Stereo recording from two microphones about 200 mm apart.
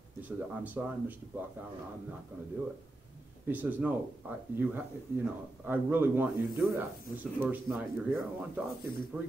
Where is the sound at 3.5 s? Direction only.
10° right (ahead or behind).